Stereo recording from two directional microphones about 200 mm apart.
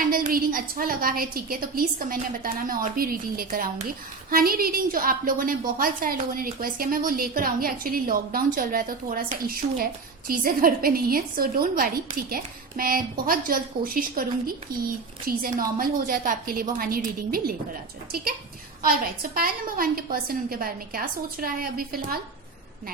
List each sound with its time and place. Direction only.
0.1 s a woman's voice: 45° right (ahead or behind)
18.8 s a woman's voice: 45° right (ahead or behind)